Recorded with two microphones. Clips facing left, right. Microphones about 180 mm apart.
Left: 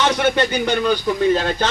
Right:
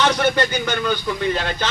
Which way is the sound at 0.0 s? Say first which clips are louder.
Left 1 dB; 25° left (ahead or behind).